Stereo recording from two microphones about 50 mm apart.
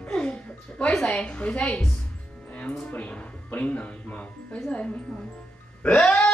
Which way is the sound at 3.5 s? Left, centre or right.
Left.